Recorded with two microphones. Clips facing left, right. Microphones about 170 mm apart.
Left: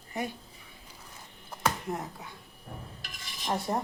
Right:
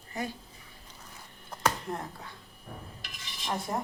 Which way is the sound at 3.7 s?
25° left (ahead or behind).